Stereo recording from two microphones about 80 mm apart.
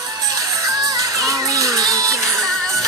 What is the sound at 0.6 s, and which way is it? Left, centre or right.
Music, right.